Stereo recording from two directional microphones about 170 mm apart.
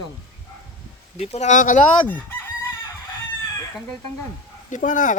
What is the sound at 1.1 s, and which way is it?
Speech, 40° left (ahead or behind).